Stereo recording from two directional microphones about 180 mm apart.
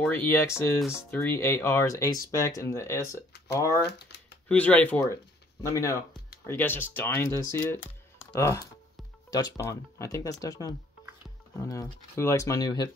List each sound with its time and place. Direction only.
0.0 s speech: 10° left (ahead or behind)
8.3 s speech: 15° left (ahead or behind)